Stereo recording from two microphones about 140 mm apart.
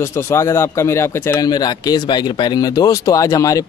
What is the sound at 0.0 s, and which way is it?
Speech, 20° left (ahead or behind).